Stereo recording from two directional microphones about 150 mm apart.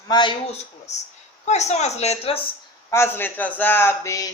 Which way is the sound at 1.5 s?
50° left (ahead or behind).